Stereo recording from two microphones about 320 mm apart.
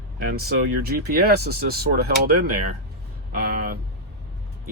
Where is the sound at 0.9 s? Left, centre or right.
Right.